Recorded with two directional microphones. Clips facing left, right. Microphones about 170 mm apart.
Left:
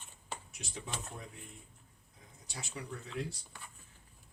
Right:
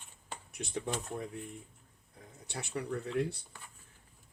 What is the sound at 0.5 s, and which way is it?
Speech, 55° right (ahead or behind).